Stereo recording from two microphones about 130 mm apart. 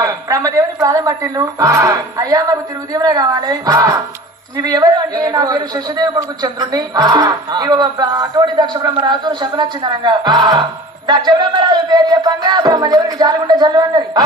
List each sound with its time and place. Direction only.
0.0 s a woman's voice: 25° right (ahead or behind)